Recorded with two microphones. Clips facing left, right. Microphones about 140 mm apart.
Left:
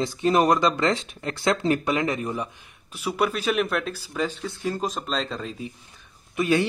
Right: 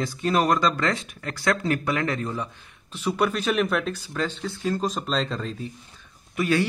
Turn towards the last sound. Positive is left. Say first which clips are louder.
# left 1 dB
turn(degrees=20)  # may be behind; listen again after turning